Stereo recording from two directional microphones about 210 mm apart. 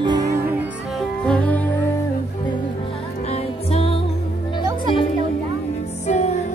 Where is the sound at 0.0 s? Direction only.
20° right (ahead or behind).